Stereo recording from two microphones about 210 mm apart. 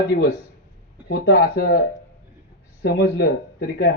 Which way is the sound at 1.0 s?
55° left (ahead or behind).